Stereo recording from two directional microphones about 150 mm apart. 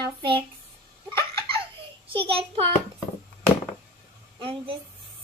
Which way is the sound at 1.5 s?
35° right (ahead or behind).